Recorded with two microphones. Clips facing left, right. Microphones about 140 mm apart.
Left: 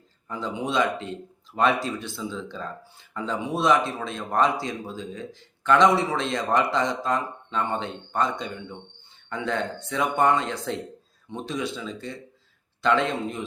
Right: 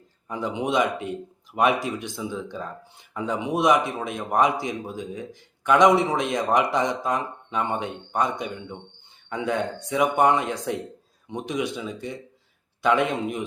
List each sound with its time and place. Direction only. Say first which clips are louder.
0.3 s speech: right 3 dB; 15° right (ahead or behind)